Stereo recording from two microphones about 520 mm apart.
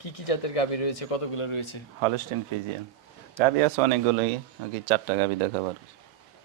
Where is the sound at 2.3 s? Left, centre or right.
Right.